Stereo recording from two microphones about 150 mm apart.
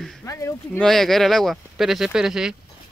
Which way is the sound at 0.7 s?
Centre (ahead or behind).